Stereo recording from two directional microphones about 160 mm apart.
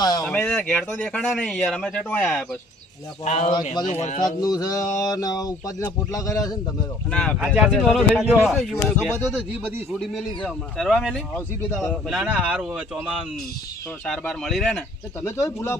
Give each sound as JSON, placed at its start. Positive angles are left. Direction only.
{"t": 0.0, "sound": "a sound", "side_deg": 25}
{"t": 0.3, "sound": "speech", "side_deg": 5}
{"t": 3.2, "sound": "speech", "side_deg": 45}
{"t": 4.2, "sound": "a sound", "side_deg": 25}
{"t": 7.1, "sound": "speech", "side_deg": 5}
{"t": 7.3, "sound": "speech", "side_deg": -5}
{"t": 15.2, "sound": "speech", "side_deg": 15}